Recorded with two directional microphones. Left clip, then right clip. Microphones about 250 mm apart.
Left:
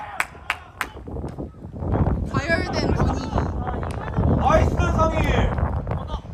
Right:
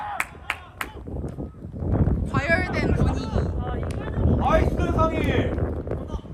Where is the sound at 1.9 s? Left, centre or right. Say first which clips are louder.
Left 1 dB; centre.